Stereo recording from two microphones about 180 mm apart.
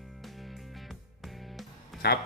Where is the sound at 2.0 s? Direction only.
60° left (ahead or behind).